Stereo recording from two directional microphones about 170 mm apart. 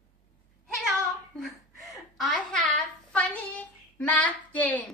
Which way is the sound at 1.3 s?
Centre (ahead or behind).